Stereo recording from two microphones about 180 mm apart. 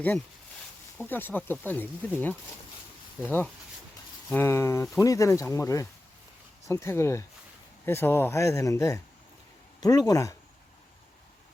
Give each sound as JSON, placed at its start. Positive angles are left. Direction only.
{"t": 0.9, "sound": "speech", "side_deg": 10}